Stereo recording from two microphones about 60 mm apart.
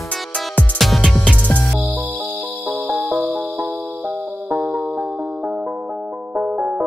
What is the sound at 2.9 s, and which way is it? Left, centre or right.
Music, right.